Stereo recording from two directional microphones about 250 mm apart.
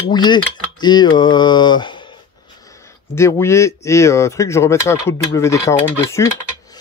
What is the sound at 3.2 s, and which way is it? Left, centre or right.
Speech, centre.